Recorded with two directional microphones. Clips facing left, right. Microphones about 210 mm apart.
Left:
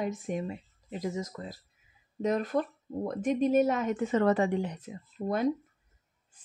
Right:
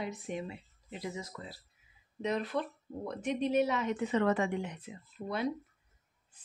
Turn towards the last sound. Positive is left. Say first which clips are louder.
# left 6 dB
turn(degrees=45)  # may be behind; listen again after turning